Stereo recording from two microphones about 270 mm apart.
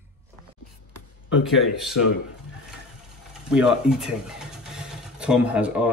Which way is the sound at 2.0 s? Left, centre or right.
Left.